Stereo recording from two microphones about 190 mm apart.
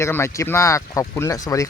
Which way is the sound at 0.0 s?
15° left (ahead or behind).